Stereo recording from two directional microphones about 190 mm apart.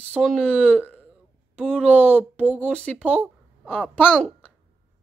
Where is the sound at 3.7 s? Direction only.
10° left (ahead or behind).